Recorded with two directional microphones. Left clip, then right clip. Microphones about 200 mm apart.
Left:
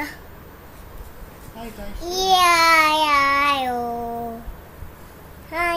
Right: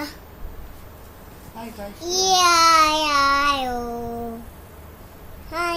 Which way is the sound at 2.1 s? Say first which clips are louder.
Left 1 dB; 15° right (ahead or behind).